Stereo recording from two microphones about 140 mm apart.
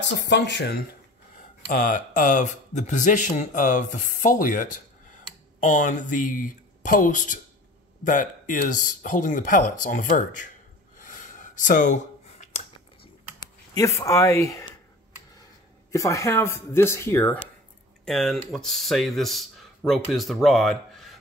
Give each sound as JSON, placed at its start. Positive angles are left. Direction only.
{"t": 1.7, "sound": "speech", "side_deg": 70}
{"t": 11.0, "sound": "gasp", "side_deg": 65}
{"t": 13.7, "sound": "speech", "side_deg": 20}
{"t": 15.9, "sound": "speech", "side_deg": 20}
{"t": 18.0, "sound": "speech", "side_deg": 5}